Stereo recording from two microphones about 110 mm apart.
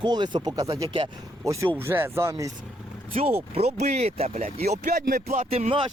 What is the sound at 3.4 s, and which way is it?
Speech, 70° right (ahead or behind).